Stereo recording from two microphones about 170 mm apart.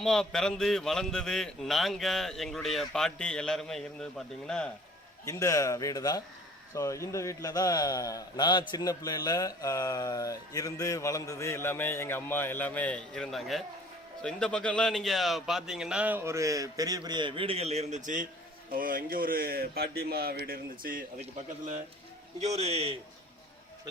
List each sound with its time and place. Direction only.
0.0 s a man's voice: 5° left (ahead or behind)
5.2 s a man's voice: 20° left (ahead or behind); by 21.0 s 60° right (ahead or behind)
22.4 s a man's voice: 40° right (ahead or behind)